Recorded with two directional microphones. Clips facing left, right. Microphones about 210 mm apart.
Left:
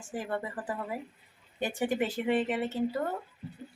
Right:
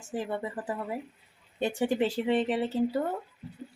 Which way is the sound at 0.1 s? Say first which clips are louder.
Right 2 dB; 25° right (ahead or behind).